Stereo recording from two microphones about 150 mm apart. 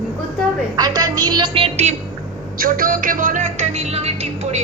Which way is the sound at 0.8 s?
25° right (ahead or behind).